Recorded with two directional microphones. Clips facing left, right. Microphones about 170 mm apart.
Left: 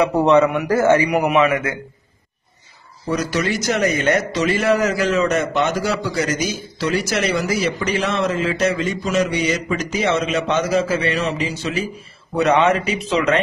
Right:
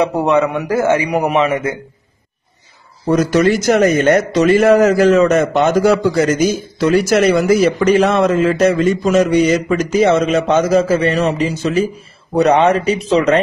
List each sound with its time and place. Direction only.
0.1 s a man's voice: 10° right (ahead or behind)
1.2 s a man's voice: 30° right (ahead or behind)
3.1 s a man's voice: 50° right (ahead or behind)